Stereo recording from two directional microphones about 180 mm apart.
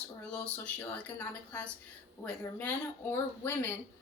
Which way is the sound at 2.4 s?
10° left (ahead or behind).